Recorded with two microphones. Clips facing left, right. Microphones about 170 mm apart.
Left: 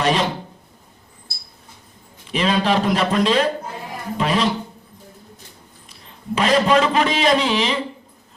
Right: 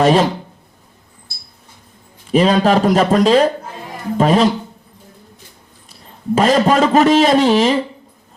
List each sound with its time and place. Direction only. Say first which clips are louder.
0.0 s a man's voice: right 7 dB; 45° right (ahead or behind)
2.3 s a man's voice: right 6 dB; 45° right (ahead or behind)
6.3 s a man's voice: right 3 dB; 45° right (ahead or behind)